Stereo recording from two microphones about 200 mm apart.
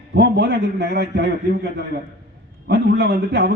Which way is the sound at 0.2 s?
55° right (ahead or behind).